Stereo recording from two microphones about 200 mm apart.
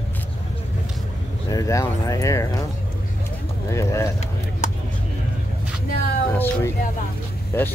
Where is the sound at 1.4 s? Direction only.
15° left (ahead or behind).